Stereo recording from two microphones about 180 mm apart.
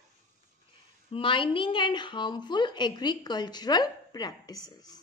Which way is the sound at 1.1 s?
30° left (ahead or behind).